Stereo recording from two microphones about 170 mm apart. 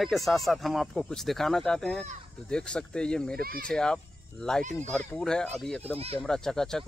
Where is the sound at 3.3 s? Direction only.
60° right (ahead or behind).